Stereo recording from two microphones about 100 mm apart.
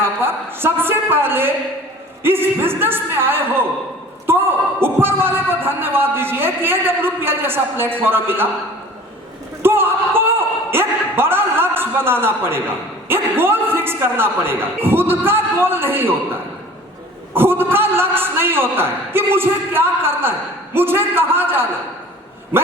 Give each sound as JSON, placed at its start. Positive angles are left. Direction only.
{"t": 0.0, "sound": "a sound", "side_deg": -20}
{"t": 2.2, "sound": "a man's voice", "side_deg": -20}
{"t": 9.6, "sound": "a man's voice", "side_deg": -20}